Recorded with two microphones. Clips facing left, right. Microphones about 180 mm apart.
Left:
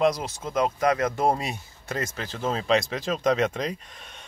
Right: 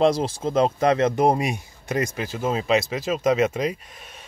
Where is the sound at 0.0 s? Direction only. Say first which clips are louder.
Right 4 dB; 30° right (ahead or behind).